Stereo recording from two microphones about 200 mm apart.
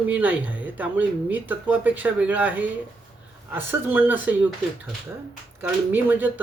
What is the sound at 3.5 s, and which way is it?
Speech, 10° right (ahead or behind).